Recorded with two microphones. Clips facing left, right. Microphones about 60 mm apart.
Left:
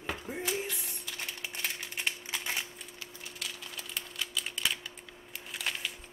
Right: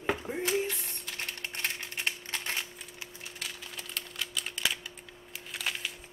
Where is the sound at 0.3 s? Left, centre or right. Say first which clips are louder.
Even; centre.